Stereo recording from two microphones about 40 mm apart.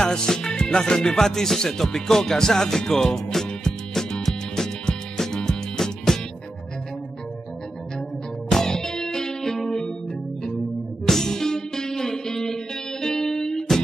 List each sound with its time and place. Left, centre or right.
0.0 s music: centre
8.5 s music: centre
11.1 s music: centre